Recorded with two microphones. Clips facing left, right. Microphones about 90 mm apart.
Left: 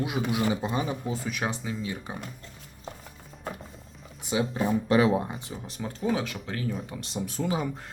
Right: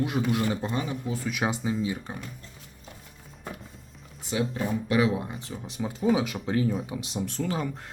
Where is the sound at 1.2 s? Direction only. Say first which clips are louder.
Right 6 dB; 5° right (ahead or behind).